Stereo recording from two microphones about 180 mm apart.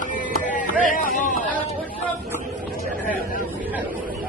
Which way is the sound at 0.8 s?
45° left (ahead or behind).